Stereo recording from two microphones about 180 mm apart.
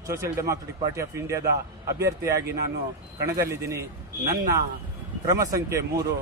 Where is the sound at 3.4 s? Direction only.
15° right (ahead or behind).